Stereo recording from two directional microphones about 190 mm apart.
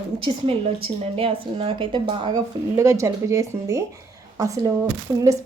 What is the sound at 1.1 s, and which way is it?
A woman's voice, 30° right (ahead or behind).